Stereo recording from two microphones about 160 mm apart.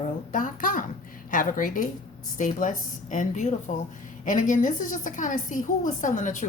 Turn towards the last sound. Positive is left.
turn(degrees=50)  # may be behind; listen again after turning